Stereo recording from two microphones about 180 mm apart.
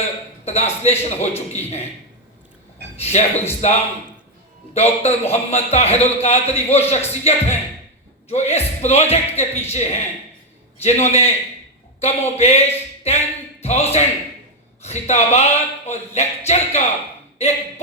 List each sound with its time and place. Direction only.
0.4 s a man's voice: 35° left (ahead or behind)
2.9 s a man's voice: 35° left (ahead or behind)